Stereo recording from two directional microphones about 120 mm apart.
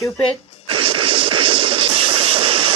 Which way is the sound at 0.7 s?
45° right (ahead or behind).